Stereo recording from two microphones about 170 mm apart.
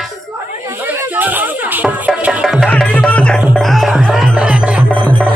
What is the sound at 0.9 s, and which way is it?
Music, 10° right (ahead or behind).